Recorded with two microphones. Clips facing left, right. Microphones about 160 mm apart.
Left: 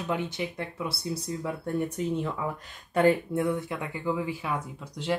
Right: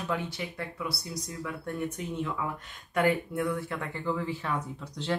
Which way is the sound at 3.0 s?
25° left (ahead or behind).